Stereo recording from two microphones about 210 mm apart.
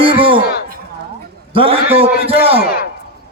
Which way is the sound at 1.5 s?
25° right (ahead or behind).